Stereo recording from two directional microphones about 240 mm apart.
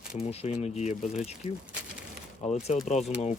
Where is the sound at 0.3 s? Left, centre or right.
Left.